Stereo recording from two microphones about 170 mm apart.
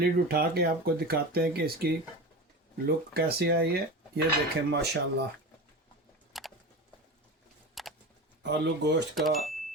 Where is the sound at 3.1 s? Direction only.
70° right (ahead or behind).